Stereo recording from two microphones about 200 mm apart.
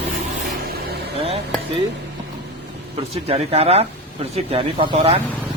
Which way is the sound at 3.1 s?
30° right (ahead or behind).